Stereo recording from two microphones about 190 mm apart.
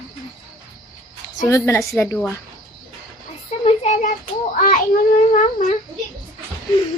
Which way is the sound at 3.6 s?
35° left (ahead or behind).